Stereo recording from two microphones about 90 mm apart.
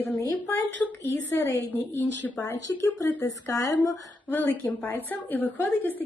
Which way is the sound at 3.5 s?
40° left (ahead or behind).